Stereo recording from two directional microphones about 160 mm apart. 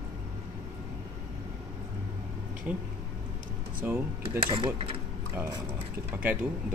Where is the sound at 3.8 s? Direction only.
10° right (ahead or behind).